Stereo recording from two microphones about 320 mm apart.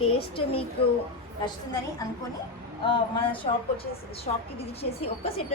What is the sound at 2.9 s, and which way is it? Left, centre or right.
Speech, centre.